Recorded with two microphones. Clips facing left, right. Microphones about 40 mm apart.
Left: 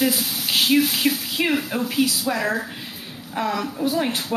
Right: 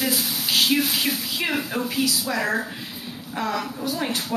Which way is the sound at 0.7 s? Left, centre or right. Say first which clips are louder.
Left 3 dB; centre.